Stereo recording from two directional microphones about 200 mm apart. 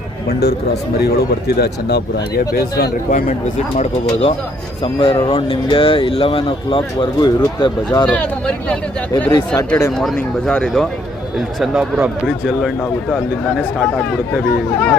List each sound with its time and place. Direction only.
0.3 s speech: 55° left (ahead or behind)
3.8 s speech: 30° left (ahead or behind)
8.0 s speech: 5° left (ahead or behind)